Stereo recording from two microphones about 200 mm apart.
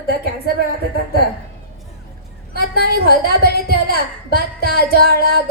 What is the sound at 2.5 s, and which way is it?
A woman's voice, 50° right (ahead or behind).